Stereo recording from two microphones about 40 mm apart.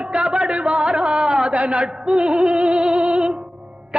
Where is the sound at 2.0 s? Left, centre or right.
Right.